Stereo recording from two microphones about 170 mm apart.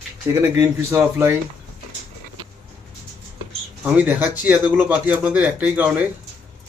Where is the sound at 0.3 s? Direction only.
15° right (ahead or behind).